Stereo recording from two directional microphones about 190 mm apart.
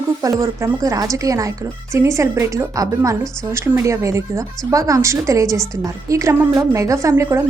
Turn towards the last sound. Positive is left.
turn(degrees=-15)  # may be behind; listen again after turning